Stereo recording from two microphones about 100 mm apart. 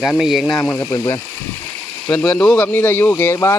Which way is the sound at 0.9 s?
40° left (ahead or behind).